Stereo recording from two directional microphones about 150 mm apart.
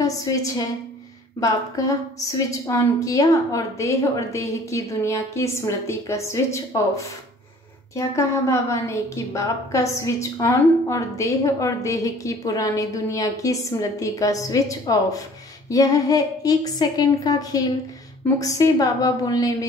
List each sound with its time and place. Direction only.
0.0 s a woman's voice: 25° left (ahead or behind)